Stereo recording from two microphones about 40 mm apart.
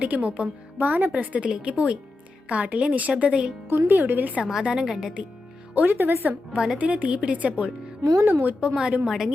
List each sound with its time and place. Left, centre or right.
0.0 s a woman's voice: right
0.8 s speech: right
1.5 s a woman's voice: right
3.7 s a woman's voice: right
4.6 s a woman's voice: right
4.9 s speech: centre
5.7 s a woman's voice: right
6.7 s a woman's voice: right
8.2 s a woman's voice: right
8.6 s a woman's voice: right